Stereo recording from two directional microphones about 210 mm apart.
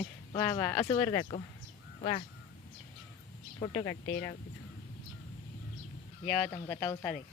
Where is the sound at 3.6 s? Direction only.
15° left (ahead or behind).